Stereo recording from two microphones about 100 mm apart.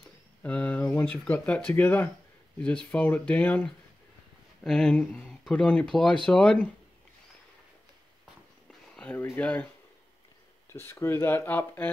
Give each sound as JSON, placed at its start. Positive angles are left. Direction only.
{"t": 0.4, "sound": "speech", "side_deg": 15}
{"t": 8.9, "sound": "speech", "side_deg": 15}
{"t": 10.7, "sound": "speech", "side_deg": 25}